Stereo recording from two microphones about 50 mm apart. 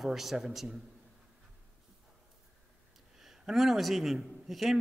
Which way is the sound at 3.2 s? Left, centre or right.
Centre.